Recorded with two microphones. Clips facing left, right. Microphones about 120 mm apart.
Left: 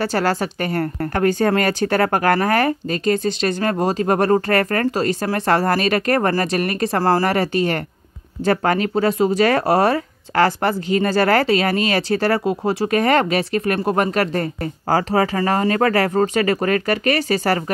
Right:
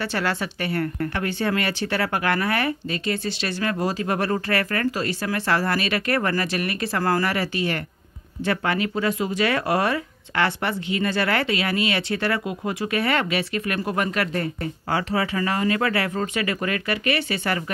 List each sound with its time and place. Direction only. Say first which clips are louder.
0.0 s speech: left 6 dB; 40° left (ahead or behind)